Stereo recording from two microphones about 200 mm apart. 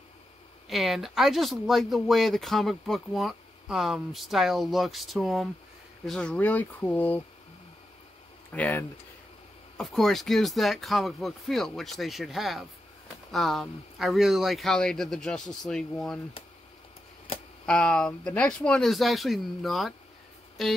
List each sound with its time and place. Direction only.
0.7 s speech: centre (ahead or behind)
8.5 s speech: 10° left (ahead or behind)
17.3 s a sound: 30° left (ahead or behind)
17.6 s speech: 5° left (ahead or behind)